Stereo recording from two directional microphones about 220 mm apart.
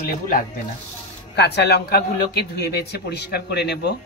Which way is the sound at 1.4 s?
45° left (ahead or behind).